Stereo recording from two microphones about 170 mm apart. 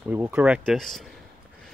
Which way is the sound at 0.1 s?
10° right (ahead or behind).